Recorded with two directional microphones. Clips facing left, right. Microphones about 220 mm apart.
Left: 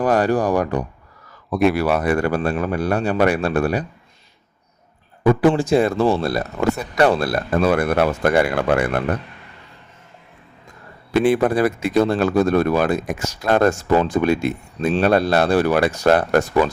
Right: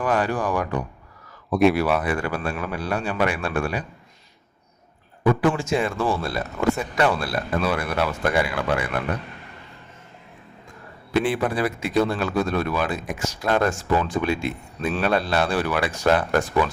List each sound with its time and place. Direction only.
0.0 s a man's voice: 40° left (ahead or behind)
1.5 s speech: centre (ahead or behind)
1.9 s a man's voice: 40° left (ahead or behind)
5.2 s a man's voice: 35° left (ahead or behind)
11.1 s a man's voice: 45° left (ahead or behind)